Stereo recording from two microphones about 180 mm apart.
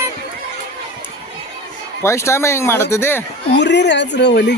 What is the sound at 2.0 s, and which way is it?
Speech, 15° left (ahead or behind).